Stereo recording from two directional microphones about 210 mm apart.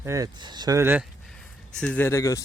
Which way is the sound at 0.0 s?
15° right (ahead or behind).